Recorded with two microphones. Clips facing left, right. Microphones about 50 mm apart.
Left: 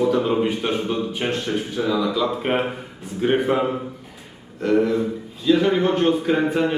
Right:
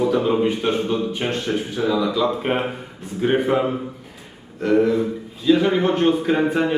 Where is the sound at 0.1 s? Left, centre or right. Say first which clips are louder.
Right 1 dB; centre.